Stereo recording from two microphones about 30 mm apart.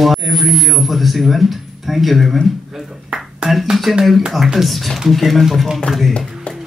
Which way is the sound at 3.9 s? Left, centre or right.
Centre.